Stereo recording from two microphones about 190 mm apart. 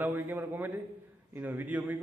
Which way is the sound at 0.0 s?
10° right (ahead or behind).